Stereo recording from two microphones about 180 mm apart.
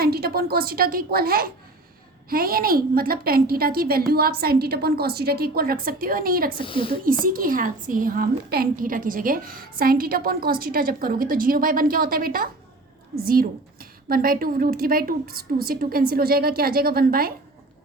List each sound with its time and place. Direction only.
0.0 s a woman's voice: 60° right (ahead or behind)
6.7 s speech: 30° left (ahead or behind)
7.0 s a woman's voice: 50° right (ahead or behind)